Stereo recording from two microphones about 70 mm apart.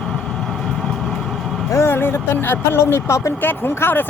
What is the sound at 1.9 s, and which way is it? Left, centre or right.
Speech, left.